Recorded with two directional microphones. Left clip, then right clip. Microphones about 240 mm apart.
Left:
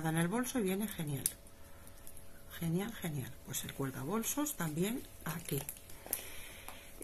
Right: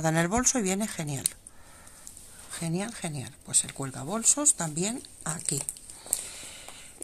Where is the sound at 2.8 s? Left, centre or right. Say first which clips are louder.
Right 7 dB; right.